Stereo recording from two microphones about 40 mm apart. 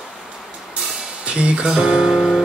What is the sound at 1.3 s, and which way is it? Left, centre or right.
Music, right.